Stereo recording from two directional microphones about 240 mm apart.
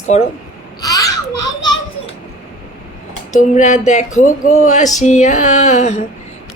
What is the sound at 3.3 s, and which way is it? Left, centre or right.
Speech, left.